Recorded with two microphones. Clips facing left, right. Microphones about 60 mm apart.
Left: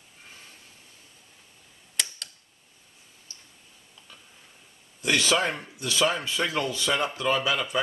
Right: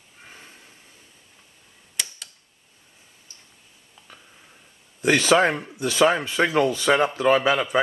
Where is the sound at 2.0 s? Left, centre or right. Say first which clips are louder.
Even; centre.